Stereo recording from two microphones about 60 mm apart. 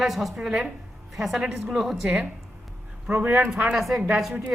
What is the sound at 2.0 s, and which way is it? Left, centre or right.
A man's voice, centre.